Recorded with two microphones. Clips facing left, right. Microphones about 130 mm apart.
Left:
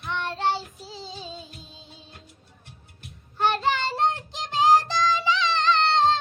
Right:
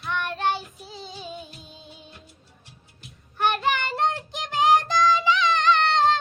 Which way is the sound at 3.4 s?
20° left (ahead or behind).